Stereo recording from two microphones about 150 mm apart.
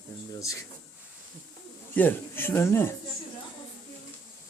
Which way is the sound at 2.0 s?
15° left (ahead or behind).